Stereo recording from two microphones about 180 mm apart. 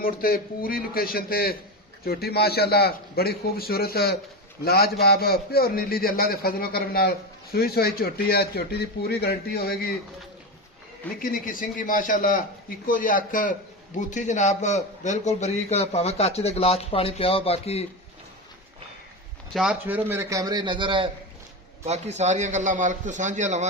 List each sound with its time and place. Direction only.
0.0 s a man's voice: 55° left (ahead or behind)
11.2 s a man's voice: 50° left (ahead or behind); by 17.8 s 35° left (ahead or behind)
19.5 s a man's voice: 5° right (ahead or behind); by 21.1 s 25° right (ahead or behind)
21.8 s a man's voice: 40° right (ahead or behind)